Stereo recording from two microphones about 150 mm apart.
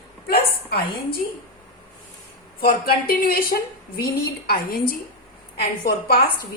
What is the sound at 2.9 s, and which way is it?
A woman's voice, 85° left.